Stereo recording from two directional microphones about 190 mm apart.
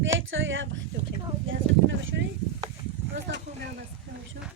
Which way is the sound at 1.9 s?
75° right (ahead or behind).